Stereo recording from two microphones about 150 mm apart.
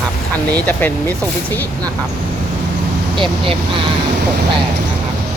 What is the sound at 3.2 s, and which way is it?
Speech, 35° right (ahead or behind).